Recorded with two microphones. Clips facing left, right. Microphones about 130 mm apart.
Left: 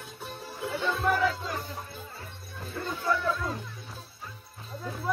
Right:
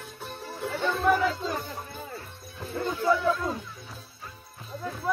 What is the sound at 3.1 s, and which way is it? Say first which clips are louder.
Speech: right 3 dB; 10° right (ahead or behind).